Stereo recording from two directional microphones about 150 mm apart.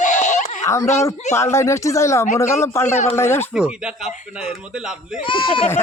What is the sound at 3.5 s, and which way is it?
Speech, 5° right (ahead or behind).